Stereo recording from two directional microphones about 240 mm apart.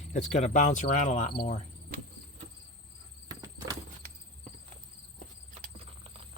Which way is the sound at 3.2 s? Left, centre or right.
Centre.